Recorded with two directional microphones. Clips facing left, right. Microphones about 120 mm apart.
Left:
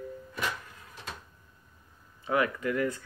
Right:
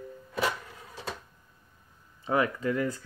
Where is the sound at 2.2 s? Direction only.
30° right (ahead or behind).